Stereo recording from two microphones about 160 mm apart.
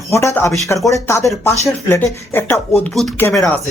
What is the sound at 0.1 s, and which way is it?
Speech, 20° left (ahead or behind).